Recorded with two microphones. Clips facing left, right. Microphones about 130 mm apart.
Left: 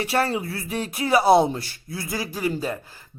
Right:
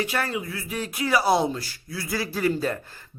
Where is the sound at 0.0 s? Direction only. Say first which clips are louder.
Left 4 dB; 30° left (ahead or behind).